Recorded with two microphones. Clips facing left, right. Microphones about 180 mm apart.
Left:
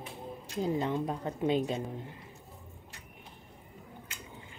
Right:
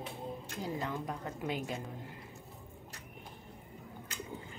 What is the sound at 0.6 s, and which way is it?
A woman's voice, 25° left (ahead or behind).